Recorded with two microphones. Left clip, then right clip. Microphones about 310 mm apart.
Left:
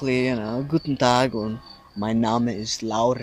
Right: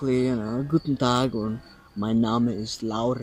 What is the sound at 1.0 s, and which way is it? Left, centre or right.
Speech, left.